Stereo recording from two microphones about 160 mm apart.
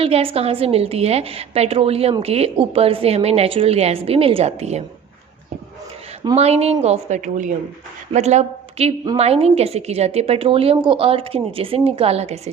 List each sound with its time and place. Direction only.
0.0 s a woman's voice: 35° right (ahead or behind)
6.3 s a woman's voice: 40° right (ahead or behind)